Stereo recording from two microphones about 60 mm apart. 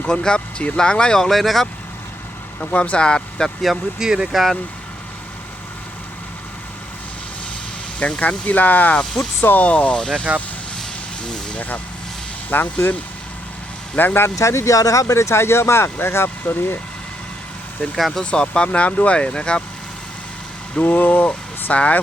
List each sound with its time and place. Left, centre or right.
0.0 s speech: centre
2.7 s speech: left
3.6 s speech: centre
4.1 s speech: centre
7.9 s speech: centre
9.0 s speech: centre
9.4 s speech: left; by 10.2 s centre
11.2 s vehicle: centre
12.5 s speech: left
14.3 s speech: left
17.9 s speech: centre
18.2 s speech: centre
20.7 s speech: left